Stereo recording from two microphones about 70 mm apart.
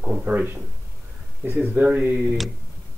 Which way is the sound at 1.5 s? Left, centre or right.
Right.